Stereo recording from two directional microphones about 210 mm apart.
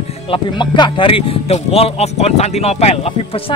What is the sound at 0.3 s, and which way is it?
Speech, 20° left (ahead or behind).